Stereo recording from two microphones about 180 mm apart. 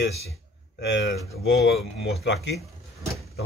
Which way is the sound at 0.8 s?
80° left.